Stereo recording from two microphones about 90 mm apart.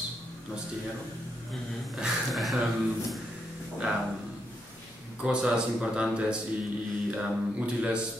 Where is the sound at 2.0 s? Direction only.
Centre (ahead or behind).